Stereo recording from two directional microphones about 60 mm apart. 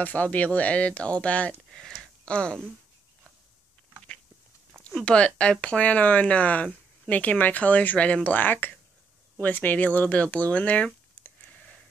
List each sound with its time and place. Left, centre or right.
0.0 s speech: left
1.7 s a sound: centre
2.2 s speech: centre
5.0 s speech: centre